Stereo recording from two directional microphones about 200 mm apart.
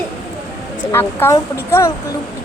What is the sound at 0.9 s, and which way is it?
Speech, 10° left (ahead or behind).